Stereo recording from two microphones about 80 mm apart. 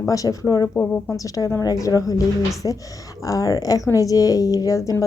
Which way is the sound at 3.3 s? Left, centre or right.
Left.